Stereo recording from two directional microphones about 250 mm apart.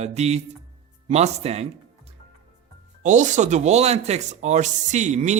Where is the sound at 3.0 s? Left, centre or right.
Right.